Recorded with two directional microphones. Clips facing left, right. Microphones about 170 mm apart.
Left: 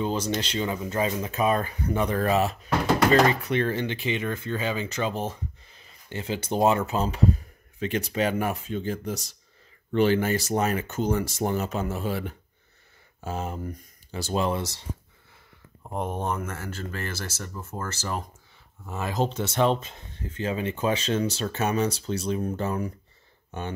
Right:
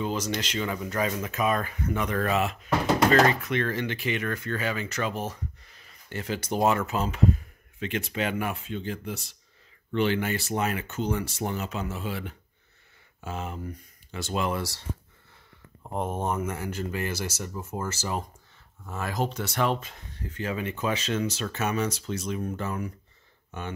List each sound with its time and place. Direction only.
0.0 s speech: 30° left (ahead or behind)
15.8 s speech: centre (ahead or behind)
18.9 s speech: 20° left (ahead or behind)